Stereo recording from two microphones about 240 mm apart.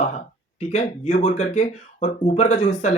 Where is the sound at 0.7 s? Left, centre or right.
Left.